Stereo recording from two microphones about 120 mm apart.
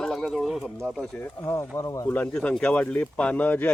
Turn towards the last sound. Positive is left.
turn(degrees=15)  # may be behind; listen again after turning